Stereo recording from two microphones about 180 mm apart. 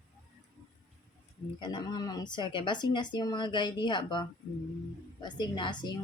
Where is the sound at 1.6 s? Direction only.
25° left (ahead or behind).